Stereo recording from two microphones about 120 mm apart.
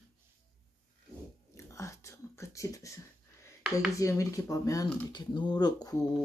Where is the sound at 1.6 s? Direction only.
25° left (ahead or behind).